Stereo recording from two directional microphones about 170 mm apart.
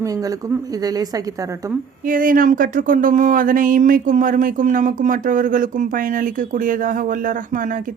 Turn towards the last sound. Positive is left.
turn(degrees=-50)  # may be behind; listen again after turning